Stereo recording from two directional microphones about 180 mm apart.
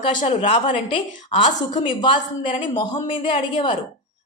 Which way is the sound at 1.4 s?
45° left (ahead or behind).